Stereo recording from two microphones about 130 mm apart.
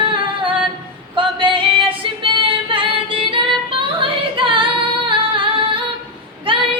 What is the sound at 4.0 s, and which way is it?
Music, 40° right (ahead or behind).